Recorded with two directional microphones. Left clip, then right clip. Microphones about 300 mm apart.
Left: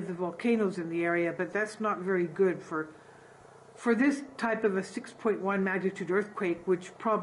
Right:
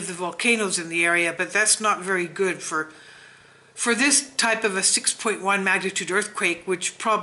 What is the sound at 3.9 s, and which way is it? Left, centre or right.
Speech, centre.